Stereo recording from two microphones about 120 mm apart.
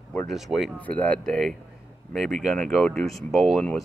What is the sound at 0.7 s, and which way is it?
Speech, 10° left (ahead or behind).